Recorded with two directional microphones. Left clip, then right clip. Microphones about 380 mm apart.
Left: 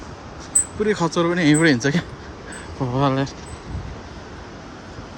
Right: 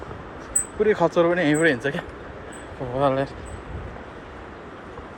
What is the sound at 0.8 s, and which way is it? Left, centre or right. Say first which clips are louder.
Speech: right 2 dB; centre.